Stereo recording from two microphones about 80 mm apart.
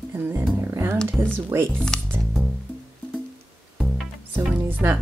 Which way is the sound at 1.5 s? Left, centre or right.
Right.